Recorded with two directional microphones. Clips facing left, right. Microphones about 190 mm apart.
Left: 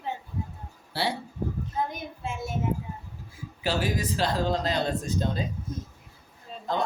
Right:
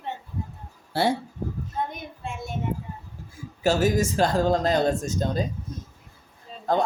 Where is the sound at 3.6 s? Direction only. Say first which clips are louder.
Right 7 dB; 45° right (ahead or behind).